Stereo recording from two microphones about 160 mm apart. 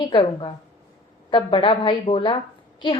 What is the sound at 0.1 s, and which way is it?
A woman's voice, 30° left (ahead or behind).